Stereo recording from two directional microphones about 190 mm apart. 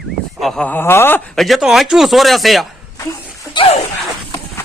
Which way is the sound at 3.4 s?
25° left (ahead or behind).